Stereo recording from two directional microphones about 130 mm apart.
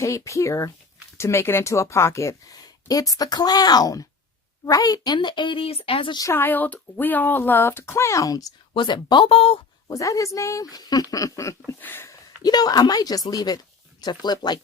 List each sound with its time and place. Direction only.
0.0 s a woman's voice: 25° left (ahead or behind); by 6.2 s 40° left (ahead or behind)
6.2 s speech: 15° left (ahead or behind)
8.7 s a woman's voice: 40° left (ahead or behind)
9.9 s speech: 25° left (ahead or behind)
12.4 s a woman's voice: 30° left (ahead or behind)